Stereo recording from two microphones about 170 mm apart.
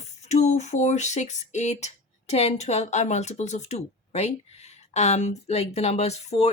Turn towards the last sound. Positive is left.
turn(degrees=40)  # may be behind; listen again after turning